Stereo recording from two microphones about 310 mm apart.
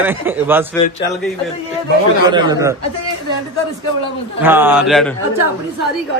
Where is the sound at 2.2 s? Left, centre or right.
Centre.